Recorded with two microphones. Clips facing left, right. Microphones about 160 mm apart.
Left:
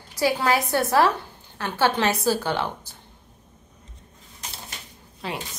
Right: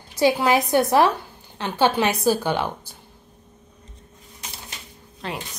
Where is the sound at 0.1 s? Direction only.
20° right (ahead or behind).